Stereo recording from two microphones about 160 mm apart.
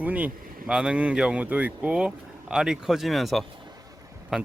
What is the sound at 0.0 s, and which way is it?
Speech, 10° right (ahead or behind).